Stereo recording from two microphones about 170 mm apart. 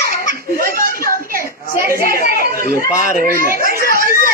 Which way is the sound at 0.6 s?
60° right (ahead or behind).